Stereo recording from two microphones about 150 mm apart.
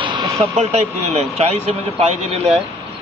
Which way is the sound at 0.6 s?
45° right (ahead or behind).